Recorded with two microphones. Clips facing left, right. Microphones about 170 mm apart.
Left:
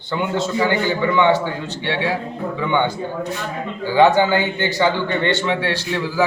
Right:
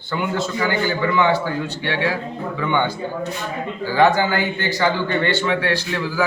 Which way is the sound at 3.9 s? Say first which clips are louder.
Left 3 dB; 20° left (ahead or behind).